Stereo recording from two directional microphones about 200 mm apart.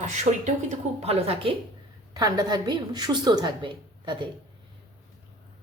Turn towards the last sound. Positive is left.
turn(degrees=-25)  # may be behind; listen again after turning